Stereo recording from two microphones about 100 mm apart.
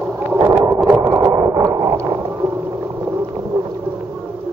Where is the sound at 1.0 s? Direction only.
50° right (ahead or behind).